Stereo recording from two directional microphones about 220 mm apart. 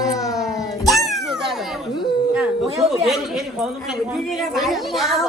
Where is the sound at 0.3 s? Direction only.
Centre (ahead or behind).